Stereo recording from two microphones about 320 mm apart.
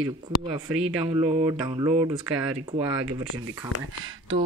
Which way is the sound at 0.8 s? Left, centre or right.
Centre.